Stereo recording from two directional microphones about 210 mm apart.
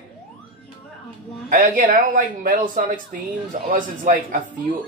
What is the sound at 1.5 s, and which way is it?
A man's voice, 40° right (ahead or behind).